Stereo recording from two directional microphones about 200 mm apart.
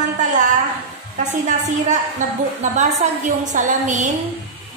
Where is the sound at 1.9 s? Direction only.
40° right (ahead or behind).